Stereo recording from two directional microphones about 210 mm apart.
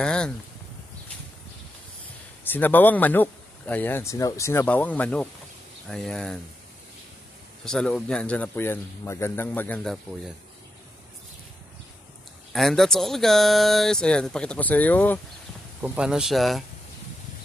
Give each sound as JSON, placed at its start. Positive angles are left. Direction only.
{"t": 0.0, "sound": "a sound", "side_deg": 5}
{"t": 2.4, "sound": "speech", "side_deg": 10}
{"t": 7.6, "sound": "speech", "side_deg": 5}
{"t": 12.5, "sound": "speech", "side_deg": 0}
{"t": 15.8, "sound": "speech", "side_deg": -5}